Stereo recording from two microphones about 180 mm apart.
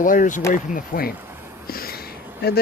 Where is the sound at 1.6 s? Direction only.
55° left (ahead or behind).